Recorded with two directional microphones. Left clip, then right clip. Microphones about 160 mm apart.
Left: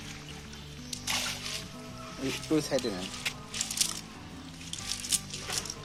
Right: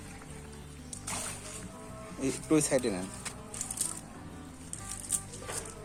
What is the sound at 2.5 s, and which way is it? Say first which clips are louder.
Speech: right 2 dB; 35° right (ahead or behind).